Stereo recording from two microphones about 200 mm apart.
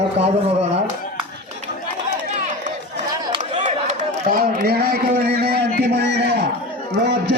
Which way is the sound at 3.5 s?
40° right (ahead or behind).